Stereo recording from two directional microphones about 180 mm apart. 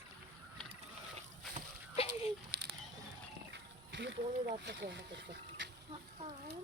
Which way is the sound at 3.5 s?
80° right.